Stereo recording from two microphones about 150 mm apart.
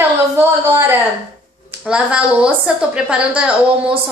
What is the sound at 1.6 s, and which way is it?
A woman's voice, 5° right (ahead or behind).